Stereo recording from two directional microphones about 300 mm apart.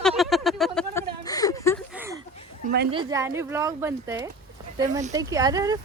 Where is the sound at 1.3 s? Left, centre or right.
Centre.